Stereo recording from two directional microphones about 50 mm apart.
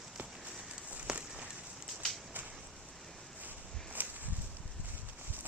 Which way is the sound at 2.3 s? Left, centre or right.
Right.